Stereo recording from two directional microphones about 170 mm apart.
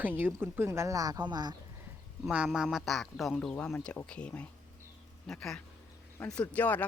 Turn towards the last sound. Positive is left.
turn(degrees=10)  # may be behind; listen again after turning